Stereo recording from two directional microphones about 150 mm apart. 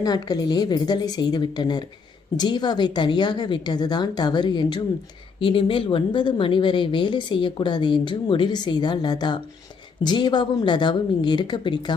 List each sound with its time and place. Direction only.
0.0 s a woman's voice: 25° left (ahead or behind)